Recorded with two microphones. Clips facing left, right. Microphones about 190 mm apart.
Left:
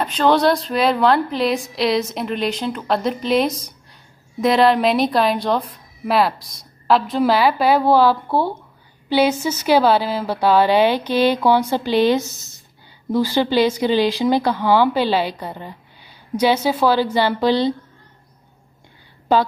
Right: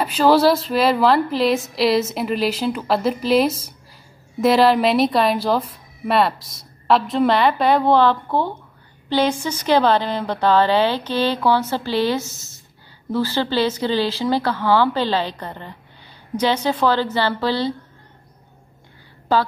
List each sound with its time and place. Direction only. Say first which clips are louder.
0.0 s a woman's voice: right 1 dB; 5° right (ahead or behind); by 17.7 s 15° left (ahead or behind)
19.3 s speech: left 2 dB; 20° left (ahead or behind)